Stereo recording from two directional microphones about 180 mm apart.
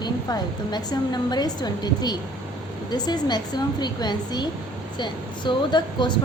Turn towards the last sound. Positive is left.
turn(degrees=25)  # may be behind; listen again after turning